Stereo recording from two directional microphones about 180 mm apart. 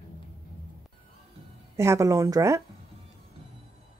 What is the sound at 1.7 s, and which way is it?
Speech, 15° right (ahead or behind).